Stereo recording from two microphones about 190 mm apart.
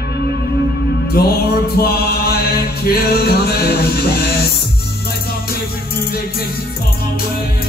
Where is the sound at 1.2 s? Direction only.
55° left (ahead or behind).